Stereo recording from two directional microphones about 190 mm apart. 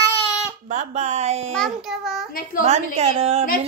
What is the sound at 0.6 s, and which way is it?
Speech, 35° right (ahead or behind).